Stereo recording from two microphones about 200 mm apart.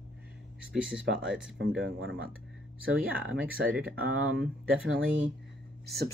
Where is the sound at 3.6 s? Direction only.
65° right (ahead or behind).